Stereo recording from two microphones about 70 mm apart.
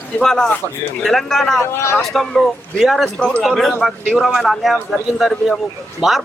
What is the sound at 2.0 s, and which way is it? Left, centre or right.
A man's voice, centre.